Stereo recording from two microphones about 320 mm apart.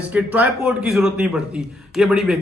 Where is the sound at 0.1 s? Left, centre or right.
Centre.